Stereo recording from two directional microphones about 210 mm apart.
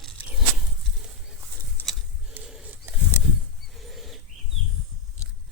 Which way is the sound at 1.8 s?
10° left (ahead or behind).